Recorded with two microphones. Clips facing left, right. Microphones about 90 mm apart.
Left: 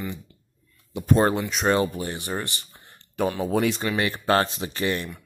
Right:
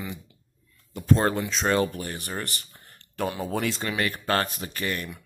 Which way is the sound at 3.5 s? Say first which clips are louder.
Left 5 dB; 10° left (ahead or behind).